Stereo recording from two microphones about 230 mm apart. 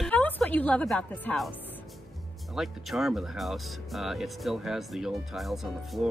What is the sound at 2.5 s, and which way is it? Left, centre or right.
Speech, centre.